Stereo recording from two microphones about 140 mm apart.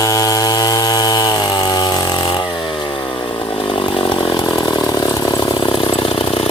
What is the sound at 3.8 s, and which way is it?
Chainsaw, 35° left (ahead or behind).